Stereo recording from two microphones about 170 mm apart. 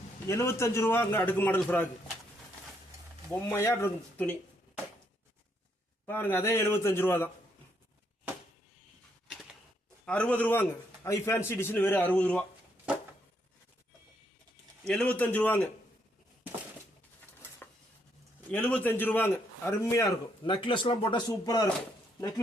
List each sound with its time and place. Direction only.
0.3 s a man's voice: 15° left (ahead or behind)
3.5 s a man's voice: 15° left (ahead or behind)
6.1 s a man's voice: 10° left (ahead or behind)
10.1 s a man's voice: 10° left (ahead or behind)
14.8 s a man's voice: 5° left (ahead or behind)
18.5 s a man's voice: 10° left (ahead or behind)